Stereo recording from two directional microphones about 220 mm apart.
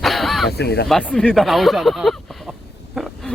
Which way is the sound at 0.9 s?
5° left (ahead or behind).